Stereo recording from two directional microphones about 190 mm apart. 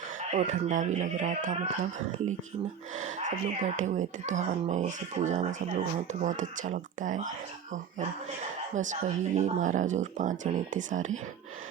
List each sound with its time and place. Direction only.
0.3 s speech: 40° right (ahead or behind)
2.9 s speech: 40° right (ahead or behind)